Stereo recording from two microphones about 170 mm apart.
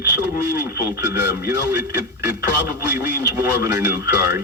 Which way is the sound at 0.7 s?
15° right (ahead or behind).